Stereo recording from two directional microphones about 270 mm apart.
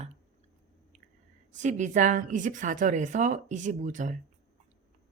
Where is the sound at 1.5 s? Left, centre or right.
Right.